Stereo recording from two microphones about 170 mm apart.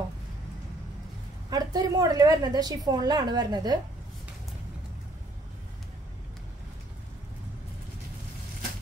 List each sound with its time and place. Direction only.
1.5 s a woman's voice: 20° right (ahead or behind)